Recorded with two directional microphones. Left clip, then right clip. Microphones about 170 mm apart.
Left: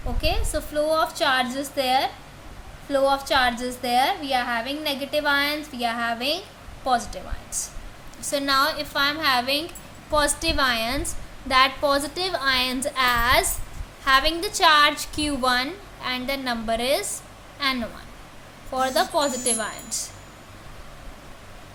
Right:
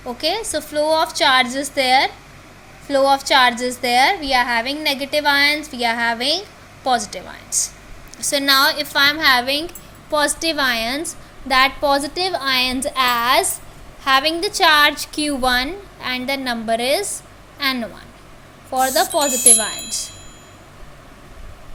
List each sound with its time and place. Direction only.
0.2 s a woman's voice: 25° right (ahead or behind)